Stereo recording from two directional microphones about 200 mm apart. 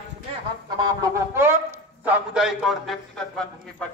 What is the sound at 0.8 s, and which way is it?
Chicken, 15° right (ahead or behind).